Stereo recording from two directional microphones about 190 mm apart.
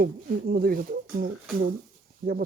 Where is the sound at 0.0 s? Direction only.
50° right (ahead or behind).